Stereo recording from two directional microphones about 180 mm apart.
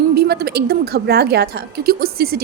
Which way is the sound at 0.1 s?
60° right (ahead or behind).